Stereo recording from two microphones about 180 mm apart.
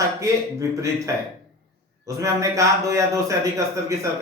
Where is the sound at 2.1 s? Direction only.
20° right (ahead or behind).